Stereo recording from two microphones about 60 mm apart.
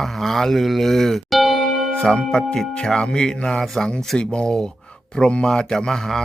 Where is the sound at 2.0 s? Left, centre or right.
Centre.